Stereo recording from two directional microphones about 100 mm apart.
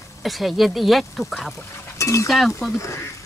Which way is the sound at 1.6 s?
30° left (ahead or behind).